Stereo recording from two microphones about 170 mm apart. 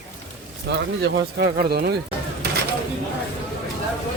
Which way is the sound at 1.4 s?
70° right (ahead or behind).